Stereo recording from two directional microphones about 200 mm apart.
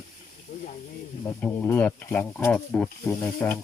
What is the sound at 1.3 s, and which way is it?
Speech, 10° left (ahead or behind).